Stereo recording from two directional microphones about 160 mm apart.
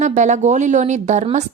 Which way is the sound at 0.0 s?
45° right (ahead or behind).